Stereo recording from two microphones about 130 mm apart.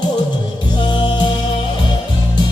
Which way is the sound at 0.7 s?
35° left (ahead or behind).